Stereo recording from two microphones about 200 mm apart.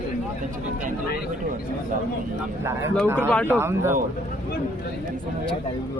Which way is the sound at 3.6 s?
10° right (ahead or behind).